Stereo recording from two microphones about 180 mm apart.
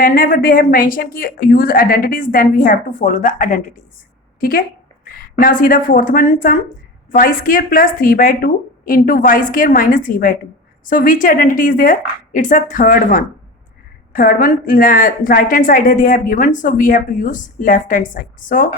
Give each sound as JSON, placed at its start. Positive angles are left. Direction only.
{"t": 0.0, "sound": "a woman's voice", "side_deg": 50}